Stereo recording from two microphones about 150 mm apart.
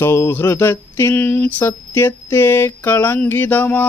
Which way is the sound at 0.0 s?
15° left (ahead or behind).